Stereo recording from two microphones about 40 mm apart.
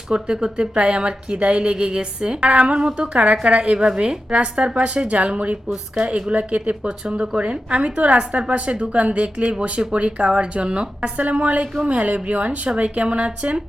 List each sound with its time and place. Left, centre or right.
0.1 s speech: right
11.2 s speech: right